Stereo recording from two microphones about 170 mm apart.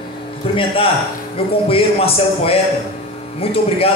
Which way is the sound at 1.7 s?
35° left (ahead or behind).